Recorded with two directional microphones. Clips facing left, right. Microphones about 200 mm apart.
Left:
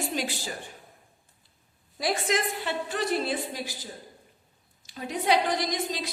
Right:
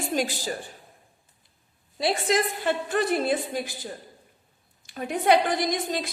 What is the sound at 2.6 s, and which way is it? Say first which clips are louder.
Speech: right 5 dB; 55° right (ahead or behind).